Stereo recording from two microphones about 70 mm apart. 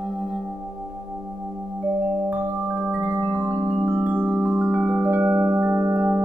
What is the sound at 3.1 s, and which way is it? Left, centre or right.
Music, right.